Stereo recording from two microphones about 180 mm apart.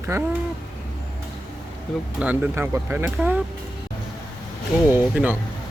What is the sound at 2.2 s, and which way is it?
Speech, 10° right (ahead or behind).